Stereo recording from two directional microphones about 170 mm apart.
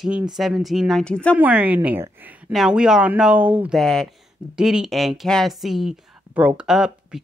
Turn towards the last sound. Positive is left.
turn(degrees=-5)  # may be behind; listen again after turning